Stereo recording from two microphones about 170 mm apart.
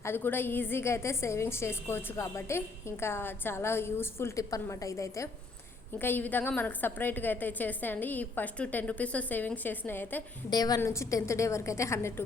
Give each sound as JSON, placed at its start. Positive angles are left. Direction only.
{"t": 0.0, "sound": "a woman's voice", "side_deg": 15}
{"t": 10.5, "sound": "a woman's voice", "side_deg": 25}